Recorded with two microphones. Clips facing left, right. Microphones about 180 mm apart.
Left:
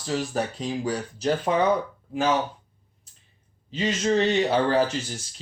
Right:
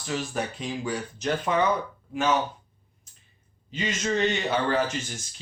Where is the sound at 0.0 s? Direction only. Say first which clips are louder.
Left 3 dB; 35° left (ahead or behind).